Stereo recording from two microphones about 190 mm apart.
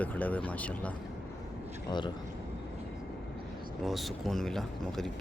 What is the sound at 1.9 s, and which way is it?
Speech, 25° left (ahead or behind).